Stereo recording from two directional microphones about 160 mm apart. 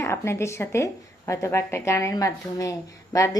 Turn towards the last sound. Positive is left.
turn(degrees=20)  # may be behind; listen again after turning